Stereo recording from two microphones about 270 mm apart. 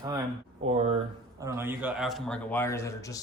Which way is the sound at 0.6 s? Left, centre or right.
Right.